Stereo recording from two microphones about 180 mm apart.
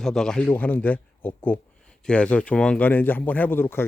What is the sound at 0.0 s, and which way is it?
Speech, centre (ahead or behind).